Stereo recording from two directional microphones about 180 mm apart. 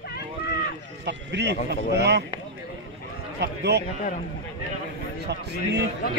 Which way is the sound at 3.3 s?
65° right (ahead or behind).